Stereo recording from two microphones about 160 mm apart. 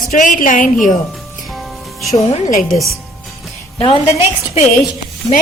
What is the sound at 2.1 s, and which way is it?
Speech, 40° left (ahead or behind).